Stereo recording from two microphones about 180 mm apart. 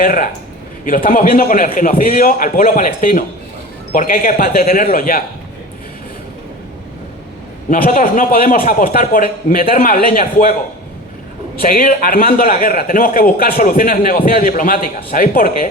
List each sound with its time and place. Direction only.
0.0 s a man's voice: 50° left (ahead or behind)
7.7 s a man's voice: 50° left (ahead or behind)
11.6 s a man's voice: 50° left (ahead or behind)